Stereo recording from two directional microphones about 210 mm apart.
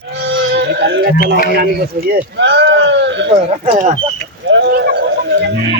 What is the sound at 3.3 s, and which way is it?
Speech, 30° right (ahead or behind).